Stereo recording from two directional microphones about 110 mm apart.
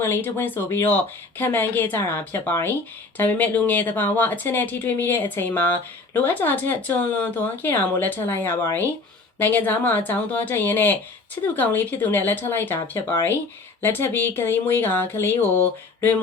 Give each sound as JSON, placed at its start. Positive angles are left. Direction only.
{"t": 0.0, "sound": "speech", "side_deg": 20}